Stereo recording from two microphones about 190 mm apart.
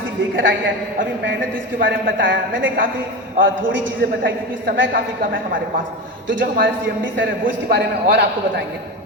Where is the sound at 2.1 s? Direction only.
75° right (ahead or behind).